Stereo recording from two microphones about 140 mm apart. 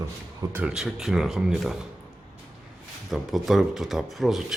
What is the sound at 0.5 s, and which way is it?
Speech, 5° right (ahead or behind).